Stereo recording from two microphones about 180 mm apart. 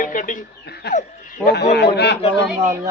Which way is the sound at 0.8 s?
65° left (ahead or behind).